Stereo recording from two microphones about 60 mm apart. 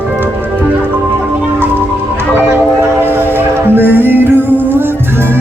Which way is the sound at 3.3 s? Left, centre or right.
Right.